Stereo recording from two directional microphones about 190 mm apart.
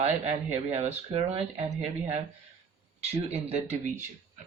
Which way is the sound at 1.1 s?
30° right (ahead or behind).